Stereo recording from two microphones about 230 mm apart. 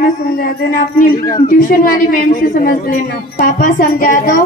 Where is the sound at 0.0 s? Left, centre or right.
Left.